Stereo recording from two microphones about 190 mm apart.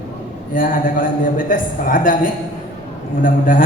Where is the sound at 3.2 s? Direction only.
45° left (ahead or behind).